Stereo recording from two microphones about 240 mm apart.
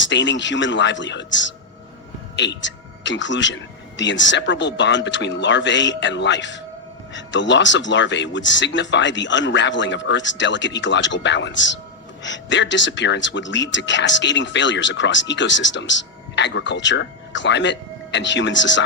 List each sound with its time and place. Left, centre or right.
0.0 s speech: left